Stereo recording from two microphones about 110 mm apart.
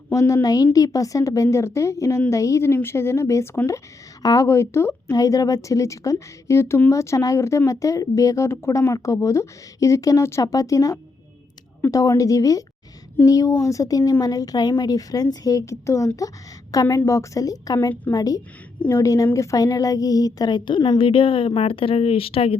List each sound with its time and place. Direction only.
0.1 s a woman's voice: 30° left (ahead or behind)
21.0 s a woman's voice: 50° left (ahead or behind)